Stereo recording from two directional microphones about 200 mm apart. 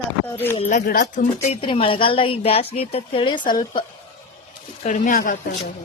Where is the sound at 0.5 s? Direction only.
35° left (ahead or behind).